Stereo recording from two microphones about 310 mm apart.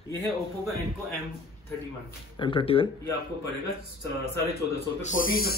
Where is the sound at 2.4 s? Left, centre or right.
Centre.